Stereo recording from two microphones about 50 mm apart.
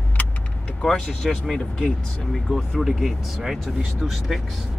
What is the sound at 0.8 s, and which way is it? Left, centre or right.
Speech, centre.